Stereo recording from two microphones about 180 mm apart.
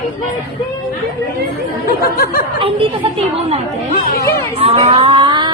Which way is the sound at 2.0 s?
55° left (ahead or behind).